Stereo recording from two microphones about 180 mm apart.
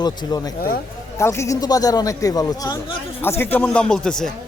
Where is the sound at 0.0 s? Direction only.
20° left (ahead or behind); by 4.3 s 5° left (ahead or behind).